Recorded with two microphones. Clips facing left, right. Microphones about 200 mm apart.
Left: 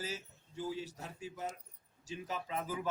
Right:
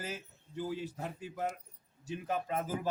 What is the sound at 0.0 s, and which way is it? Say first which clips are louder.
A man's voice: right 1 dB; 55° right (ahead or behind).